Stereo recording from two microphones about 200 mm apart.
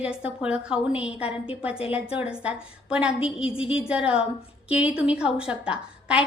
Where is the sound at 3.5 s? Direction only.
30° left (ahead or behind).